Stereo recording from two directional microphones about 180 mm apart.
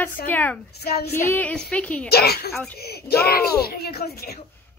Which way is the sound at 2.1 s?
60° left (ahead or behind).